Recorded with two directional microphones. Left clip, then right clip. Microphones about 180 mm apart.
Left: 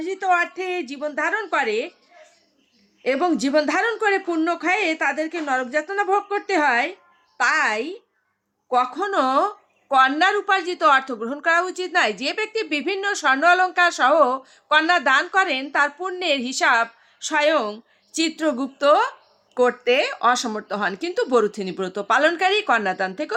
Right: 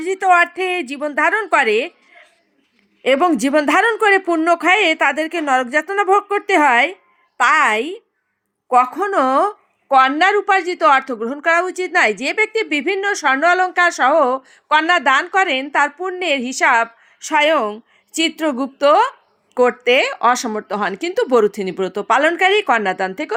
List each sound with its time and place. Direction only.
0.0 s a woman's voice: 40° right (ahead or behind)
3.0 s a woman's voice: 40° right (ahead or behind)